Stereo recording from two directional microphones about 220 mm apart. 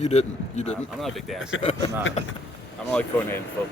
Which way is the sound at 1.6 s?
30° left (ahead or behind).